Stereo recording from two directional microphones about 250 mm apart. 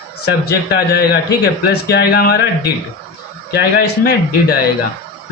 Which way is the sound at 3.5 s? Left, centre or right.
Left.